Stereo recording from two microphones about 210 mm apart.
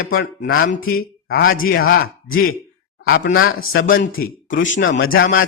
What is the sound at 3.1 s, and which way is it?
Speech, 45° left (ahead or behind).